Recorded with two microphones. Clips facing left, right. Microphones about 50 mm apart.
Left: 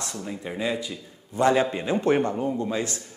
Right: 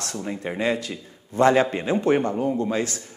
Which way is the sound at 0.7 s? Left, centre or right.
Right.